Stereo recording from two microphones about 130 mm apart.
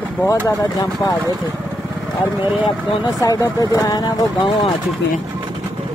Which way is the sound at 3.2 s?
25° left (ahead or behind).